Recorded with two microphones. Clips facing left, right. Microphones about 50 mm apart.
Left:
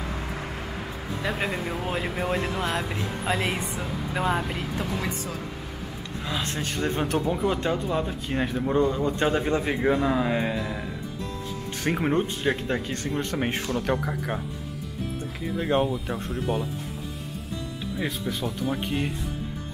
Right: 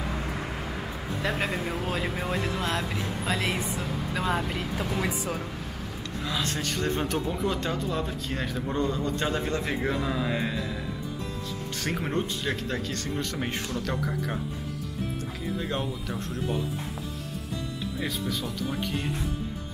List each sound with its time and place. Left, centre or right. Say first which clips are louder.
0.0 s vehicle: even; centre
2.0 s a man's voice: left 2 dB; centre
3.8 s speech: left 5 dB; centre
6.2 s a man's voice: even; left
6.9 s a man's voice: left 5 dB; centre
15.6 s a man's voice: left 12 dB; left
18.9 s a man's voice: left 3 dB; left